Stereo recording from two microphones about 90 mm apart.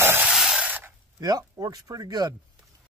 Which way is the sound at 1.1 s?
45° right (ahead or behind).